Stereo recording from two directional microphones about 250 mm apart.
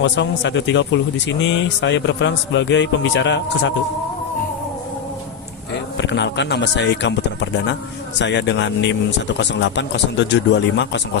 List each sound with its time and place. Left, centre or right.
0.0 s speech: left
6.0 s speech: left